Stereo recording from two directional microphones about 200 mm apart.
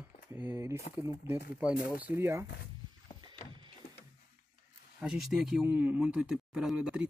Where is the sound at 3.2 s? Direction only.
25° right (ahead or behind).